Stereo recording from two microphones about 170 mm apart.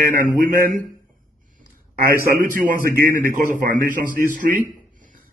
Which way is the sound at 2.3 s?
55° right (ahead or behind).